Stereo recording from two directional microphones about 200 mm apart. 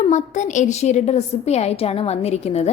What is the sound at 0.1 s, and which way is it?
A woman's voice, 35° left (ahead or behind).